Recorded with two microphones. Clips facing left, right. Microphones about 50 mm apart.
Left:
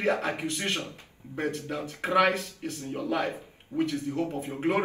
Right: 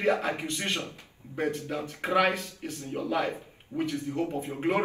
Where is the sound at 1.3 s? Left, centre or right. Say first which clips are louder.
Right 1 dB; centre.